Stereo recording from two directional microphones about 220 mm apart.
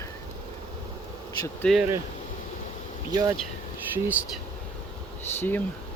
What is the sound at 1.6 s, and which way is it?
Speech, 5° left (ahead or behind).